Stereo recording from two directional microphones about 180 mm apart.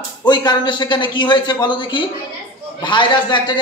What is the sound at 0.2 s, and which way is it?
A man's voice, 25° left (ahead or behind).